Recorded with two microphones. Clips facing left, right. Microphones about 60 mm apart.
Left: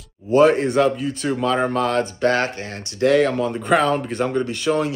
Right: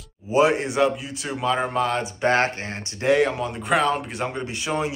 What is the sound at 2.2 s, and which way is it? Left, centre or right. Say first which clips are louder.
Speech: right 2 dB; right.